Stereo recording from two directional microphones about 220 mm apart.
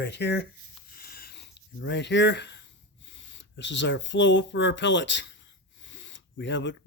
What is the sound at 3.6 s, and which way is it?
Speech, 55° left (ahead or behind).